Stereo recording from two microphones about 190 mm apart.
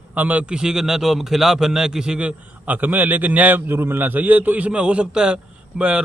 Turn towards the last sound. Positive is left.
turn(degrees=-5)  # may be behind; listen again after turning